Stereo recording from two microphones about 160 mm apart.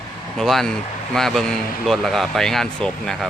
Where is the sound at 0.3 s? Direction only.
Centre (ahead or behind).